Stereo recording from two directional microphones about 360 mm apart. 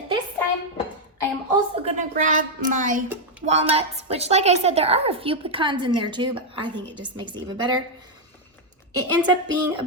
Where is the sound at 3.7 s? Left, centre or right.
Centre.